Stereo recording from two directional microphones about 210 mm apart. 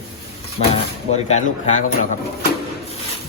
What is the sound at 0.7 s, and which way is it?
Speech, 35° left (ahead or behind).